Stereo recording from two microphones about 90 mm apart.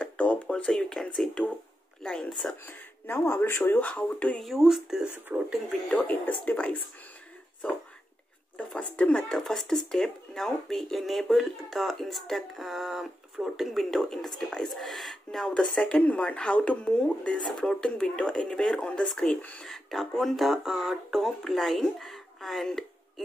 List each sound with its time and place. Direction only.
0.0 s a sound: 15° left (ahead or behind)
2.0 s speech: 5° left (ahead or behind)
2.6 s speech: 25° left (ahead or behind)
4.4 s speech: centre (ahead or behind)
5.1 s speech: 20° right (ahead or behind)
5.7 s speech: 10° left (ahead or behind)
8.5 s speech: 10° left (ahead or behind)